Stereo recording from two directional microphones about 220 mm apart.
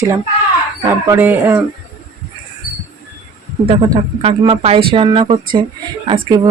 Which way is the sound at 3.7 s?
25° right (ahead or behind).